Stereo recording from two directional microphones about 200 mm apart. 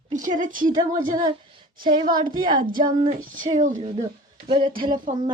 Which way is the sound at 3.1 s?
40° right (ahead or behind).